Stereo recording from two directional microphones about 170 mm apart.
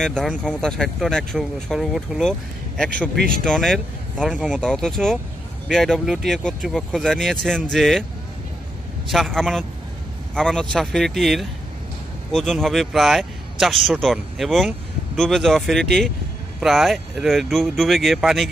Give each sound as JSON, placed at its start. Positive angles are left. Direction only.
{"t": 0.0, "sound": "a man's voice", "side_deg": 5}
{"t": 3.2, "sound": "speech", "side_deg": -60}
{"t": 3.4, "sound": "speech", "side_deg": 5}
{"t": 9.1, "sound": "speech", "side_deg": 0}